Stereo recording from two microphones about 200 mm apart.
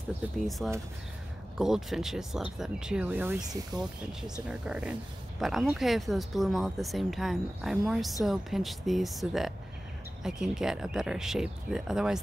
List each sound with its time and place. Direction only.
0.4 s speech: centre (ahead or behind)